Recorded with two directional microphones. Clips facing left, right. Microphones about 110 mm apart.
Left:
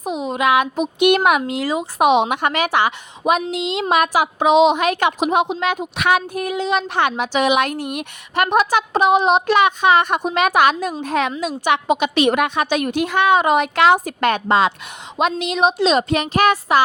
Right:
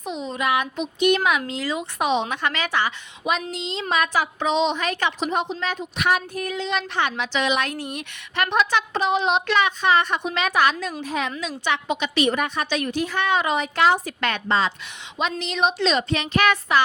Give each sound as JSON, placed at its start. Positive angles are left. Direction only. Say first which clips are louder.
{"t": 0.0, "sound": "a sound", "louder": "left 6 dB", "side_deg": 50}
{"t": 0.3, "sound": "a sound", "louder": "left 6 dB", "side_deg": 75}
{"t": 0.8, "sound": "a woman's voice", "louder": "left 5 dB", "side_deg": 60}
{"t": 1.4, "sound": "a woman's voice", "louder": "left 6 dB", "side_deg": 15}
{"t": 2.0, "sound": "a woman's voice", "louder": "left 8 dB", "side_deg": 55}
{"t": 4.4, "sound": "a woman's voice", "louder": "left 9 dB", "side_deg": 10}
{"t": 4.7, "sound": "a woman's voice", "louder": "left 7 dB", "side_deg": 50}
{"t": 6.1, "sound": "a sound", "louder": "left 5 dB", "side_deg": 65}
{"t": 6.6, "sound": "a woman's voice", "louder": "left 6 dB", "side_deg": 45}
{"t": 14.0, "sound": "a woman's voice", "louder": "left 7 dB", "side_deg": 45}
{"t": 15.4, "sound": "speech", "louder": "left 4 dB", "side_deg": 40}